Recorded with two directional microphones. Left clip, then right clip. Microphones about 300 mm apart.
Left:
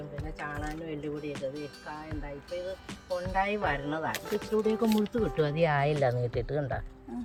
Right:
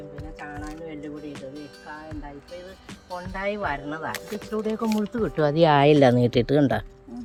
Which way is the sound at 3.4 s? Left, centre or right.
Centre.